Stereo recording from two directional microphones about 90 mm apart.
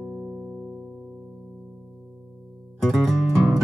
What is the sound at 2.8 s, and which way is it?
Music, centre (ahead or behind).